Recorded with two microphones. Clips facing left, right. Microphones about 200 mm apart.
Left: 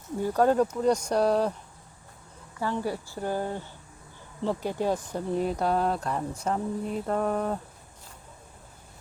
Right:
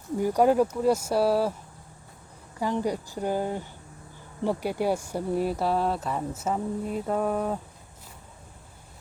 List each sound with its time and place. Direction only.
0.2 s a woman's voice: 15° right (ahead or behind)
2.6 s a woman's voice: 15° right (ahead or behind)